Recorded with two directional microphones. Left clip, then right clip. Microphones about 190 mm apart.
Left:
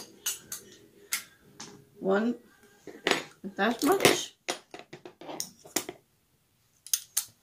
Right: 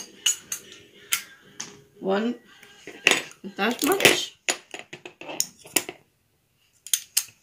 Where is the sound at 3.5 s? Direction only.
10° left (ahead or behind).